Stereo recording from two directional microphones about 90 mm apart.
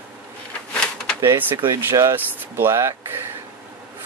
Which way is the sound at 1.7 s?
35° right (ahead or behind).